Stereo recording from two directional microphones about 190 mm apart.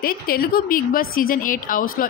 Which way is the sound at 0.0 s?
50° left (ahead or behind).